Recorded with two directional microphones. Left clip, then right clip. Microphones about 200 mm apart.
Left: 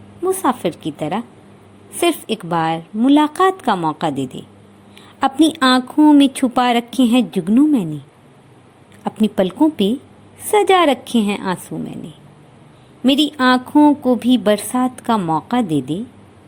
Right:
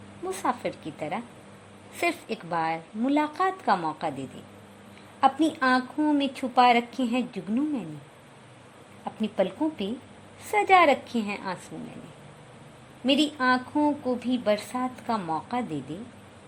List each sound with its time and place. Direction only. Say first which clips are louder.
0.4 s a woman's voice: left 10 dB; 20° left (ahead or behind)
9.0 s a woman's voice: left 9 dB; 25° left (ahead or behind)
13.1 s a woman's voice: left 9 dB; 25° left (ahead or behind)